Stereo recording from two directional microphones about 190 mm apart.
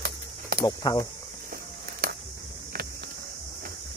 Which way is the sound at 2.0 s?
50° right (ahead or behind).